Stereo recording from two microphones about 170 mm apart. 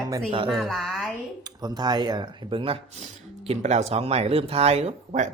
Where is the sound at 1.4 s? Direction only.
25° right (ahead or behind).